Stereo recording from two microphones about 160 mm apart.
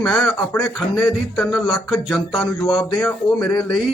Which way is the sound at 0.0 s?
Centre (ahead or behind).